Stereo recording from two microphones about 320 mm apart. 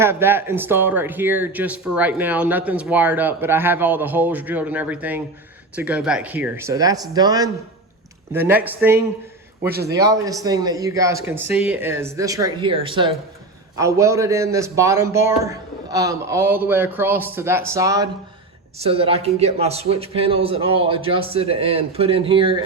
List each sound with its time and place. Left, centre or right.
0.0 s a man's voice: centre